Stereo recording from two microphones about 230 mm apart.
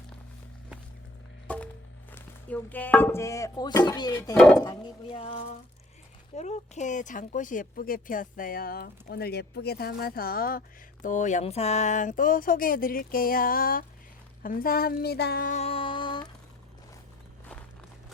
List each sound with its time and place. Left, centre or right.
1.5 s music: centre
2.1 s chopping: centre
4.6 s speech: centre; by 13.8 s left
14.4 s a sound: left